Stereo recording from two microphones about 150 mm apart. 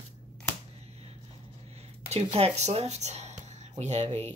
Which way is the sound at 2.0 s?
45° right (ahead or behind).